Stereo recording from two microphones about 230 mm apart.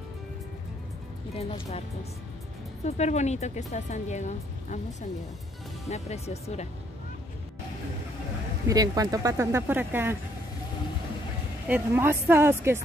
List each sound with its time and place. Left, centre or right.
1.3 s speech: left
5.9 s speech: left
8.6 s speech: centre
11.6 s speech: centre